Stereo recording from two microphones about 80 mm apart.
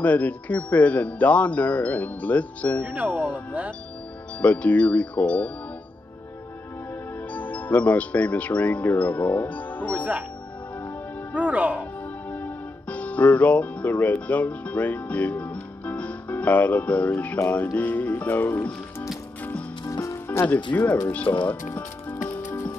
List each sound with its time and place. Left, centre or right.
0.0 s speech: centre
2.8 s speech: centre
4.4 s speech: centre
7.2 s speech: centre
9.9 s speech: centre
11.3 s speech: centre
12.3 s speech: left
19.9 s music: left
20.7 s speech: left
21.5 s music: centre